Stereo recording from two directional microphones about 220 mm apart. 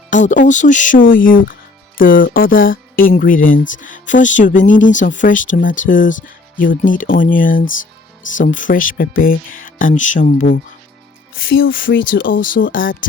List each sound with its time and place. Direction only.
0.1 s speech: 35° left (ahead or behind)
11.4 s speech: 60° left (ahead or behind)
12.3 s speech: 40° left (ahead or behind)